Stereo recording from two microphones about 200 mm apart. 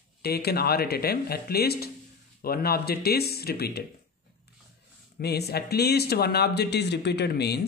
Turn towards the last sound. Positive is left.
turn(degrees=55)  # may be behind; listen again after turning